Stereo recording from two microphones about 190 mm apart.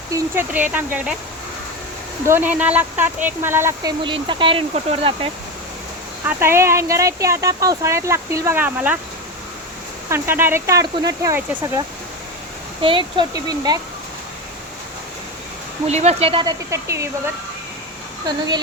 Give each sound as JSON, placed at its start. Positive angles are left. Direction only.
{"t": 0.1, "sound": "speech", "side_deg": -10}
{"t": 2.2, "sound": "speech", "side_deg": -10}
{"t": 4.0, "sound": "speech", "side_deg": -25}
{"t": 6.2, "sound": "speech", "side_deg": -15}
{"t": 10.1, "sound": "speech", "side_deg": -10}
{"t": 12.8, "sound": "speech", "side_deg": -25}
{"t": 15.9, "sound": "speech", "side_deg": -35}
{"t": 18.3, "sound": "speech", "side_deg": -20}